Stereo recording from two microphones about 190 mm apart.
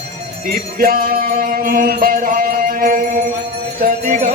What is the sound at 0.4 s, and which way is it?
Music, 50° right (ahead or behind).